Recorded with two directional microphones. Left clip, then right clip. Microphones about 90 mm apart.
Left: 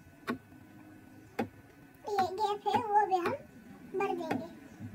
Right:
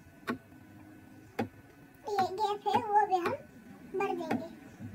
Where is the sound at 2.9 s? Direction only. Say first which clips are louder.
Even; centre (ahead or behind).